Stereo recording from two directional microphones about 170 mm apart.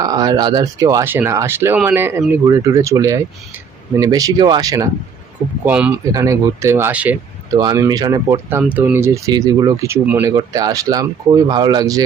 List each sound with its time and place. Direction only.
0.0 s speech: 20° right (ahead or behind)
5.6 s speech: 10° right (ahead or behind)
7.5 s speech: 20° right (ahead or behind)
8.4 s speech: 10° right (ahead or behind)